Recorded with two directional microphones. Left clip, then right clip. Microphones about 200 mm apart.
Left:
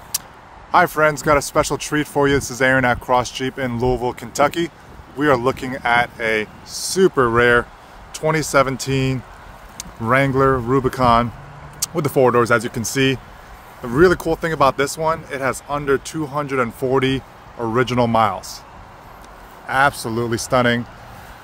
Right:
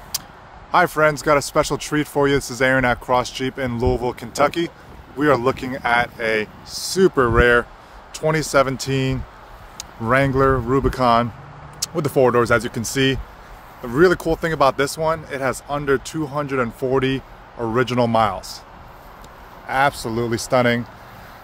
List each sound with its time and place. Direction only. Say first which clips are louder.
0.1 s a sound: left 1 dB; 10° left (ahead or behind)
0.7 s speech: left 1 dB; 5° left (ahead or behind)
19.7 s speech: left 2 dB; 5° left (ahead or behind)